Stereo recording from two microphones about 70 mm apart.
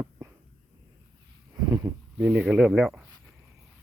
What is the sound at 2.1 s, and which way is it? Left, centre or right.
Speech, centre.